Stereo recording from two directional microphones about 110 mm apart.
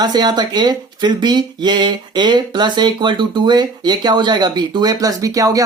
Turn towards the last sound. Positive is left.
turn(degrees=-30)  # may be behind; listen again after turning